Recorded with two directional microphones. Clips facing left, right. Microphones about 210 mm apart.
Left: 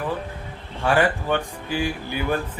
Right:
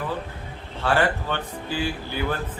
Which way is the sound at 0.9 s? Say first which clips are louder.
Left 3 dB; 15° left (ahead or behind).